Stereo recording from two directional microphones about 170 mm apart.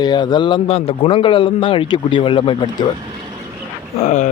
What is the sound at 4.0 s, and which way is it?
Speech, 45° left (ahead or behind).